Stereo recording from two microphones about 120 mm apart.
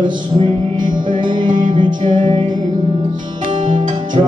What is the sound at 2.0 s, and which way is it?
Music, 90° right.